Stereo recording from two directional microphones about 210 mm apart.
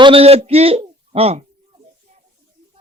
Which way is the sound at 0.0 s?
25° right (ahead or behind).